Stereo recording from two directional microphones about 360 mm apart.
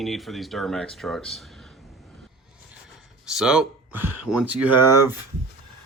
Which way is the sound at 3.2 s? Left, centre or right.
Centre.